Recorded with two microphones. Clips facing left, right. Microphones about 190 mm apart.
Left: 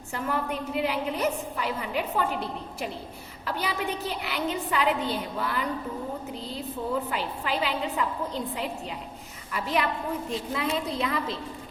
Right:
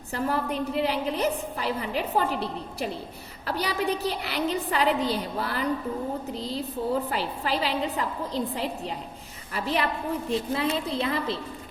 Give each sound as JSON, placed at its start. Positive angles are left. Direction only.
{"t": 0.1, "sound": "a woman's voice", "side_deg": -35}
{"t": 7.1, "sound": "a woman's voice", "side_deg": -35}